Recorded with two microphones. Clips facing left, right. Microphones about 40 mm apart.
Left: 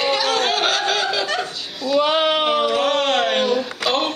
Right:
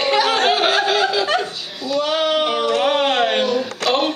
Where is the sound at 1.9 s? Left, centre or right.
Centre.